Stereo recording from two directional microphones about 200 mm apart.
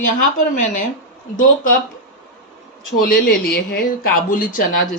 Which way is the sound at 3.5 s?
50° left (ahead or behind).